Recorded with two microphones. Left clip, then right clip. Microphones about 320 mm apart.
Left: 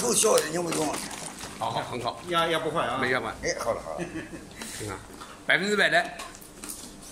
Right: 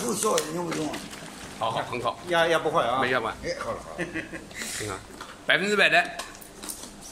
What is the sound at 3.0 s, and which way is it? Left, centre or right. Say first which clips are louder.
Speech: right 2 dB; centre.